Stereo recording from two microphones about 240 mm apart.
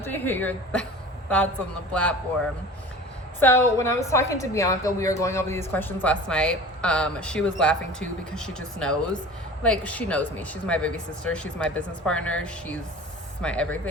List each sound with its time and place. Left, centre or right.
0.0 s a woman's voice: centre
1.9 s speech: centre
3.4 s a woman's voice: centre